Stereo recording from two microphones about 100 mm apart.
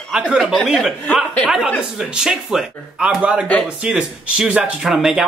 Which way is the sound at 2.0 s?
5° right (ahead or behind).